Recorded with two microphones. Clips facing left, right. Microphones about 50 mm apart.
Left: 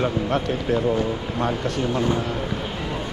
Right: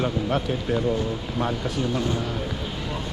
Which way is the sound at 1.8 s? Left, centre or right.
Left.